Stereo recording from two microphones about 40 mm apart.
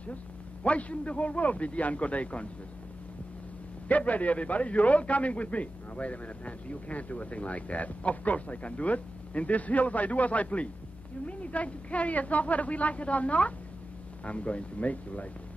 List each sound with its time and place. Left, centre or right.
0.7 s a man's voice: left
3.9 s a man's voice: left